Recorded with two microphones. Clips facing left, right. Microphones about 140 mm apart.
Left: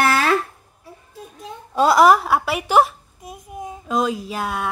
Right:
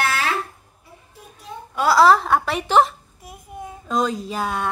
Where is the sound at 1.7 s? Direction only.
20° left (ahead or behind).